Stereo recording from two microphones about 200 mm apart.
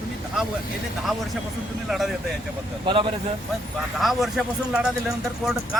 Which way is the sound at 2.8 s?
25° right (ahead or behind).